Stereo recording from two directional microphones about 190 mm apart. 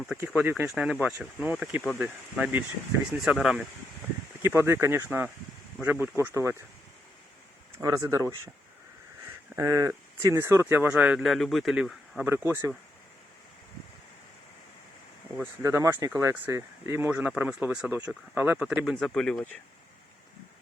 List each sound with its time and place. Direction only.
0.3 s speech: 10° right (ahead or behind)
4.4 s speech: 15° right (ahead or behind)
7.8 s speech: 15° right (ahead or behind)
9.6 s speech: 15° right (ahead or behind)
15.6 s speech: 15° right (ahead or behind); by 19.5 s 5° left (ahead or behind)